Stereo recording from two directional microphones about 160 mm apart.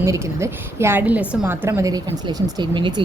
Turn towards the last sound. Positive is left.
turn(degrees=-30)  # may be behind; listen again after turning